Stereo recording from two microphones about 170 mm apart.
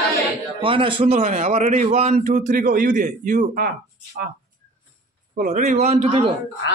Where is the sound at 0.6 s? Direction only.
30° right (ahead or behind).